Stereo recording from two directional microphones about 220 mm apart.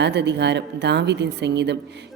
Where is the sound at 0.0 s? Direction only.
50° right (ahead or behind).